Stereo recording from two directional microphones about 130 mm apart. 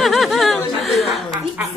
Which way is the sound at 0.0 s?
Centre (ahead or behind).